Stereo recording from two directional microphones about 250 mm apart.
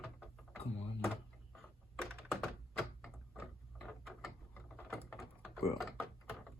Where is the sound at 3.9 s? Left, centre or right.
Centre.